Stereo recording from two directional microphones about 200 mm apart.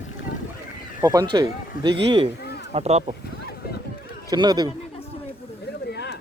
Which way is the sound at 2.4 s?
55° left (ahead or behind).